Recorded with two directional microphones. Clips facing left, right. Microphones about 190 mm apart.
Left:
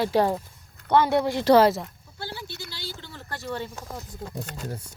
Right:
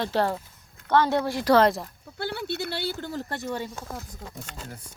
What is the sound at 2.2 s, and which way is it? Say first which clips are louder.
Speech: right 7 dB; 60° right (ahead or behind).